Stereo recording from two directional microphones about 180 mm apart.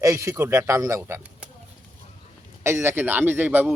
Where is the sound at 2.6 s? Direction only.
15° right (ahead or behind).